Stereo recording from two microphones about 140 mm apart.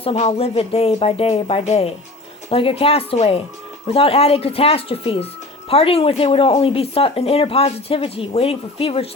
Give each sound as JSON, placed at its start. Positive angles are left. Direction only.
{"t": 0.0, "sound": "speech", "side_deg": 45}